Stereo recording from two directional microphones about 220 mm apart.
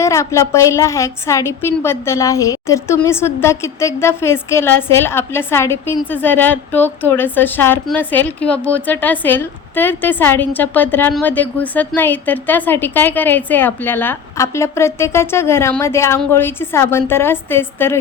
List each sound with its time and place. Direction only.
0.0 s a woman's voice: 15° left (ahead or behind)